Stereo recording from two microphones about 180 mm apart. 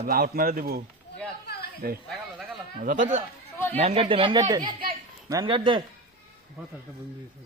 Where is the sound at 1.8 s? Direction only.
55° right (ahead or behind).